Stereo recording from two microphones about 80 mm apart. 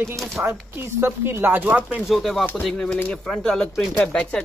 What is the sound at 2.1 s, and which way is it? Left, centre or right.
Speech, centre.